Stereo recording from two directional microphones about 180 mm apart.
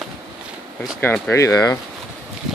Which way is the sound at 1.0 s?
10° left (ahead or behind).